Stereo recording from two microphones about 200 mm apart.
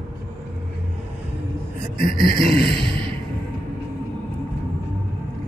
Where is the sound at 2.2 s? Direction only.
25° right (ahead or behind).